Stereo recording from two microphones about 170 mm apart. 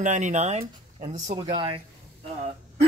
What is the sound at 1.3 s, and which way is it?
Speech, 25° right (ahead or behind).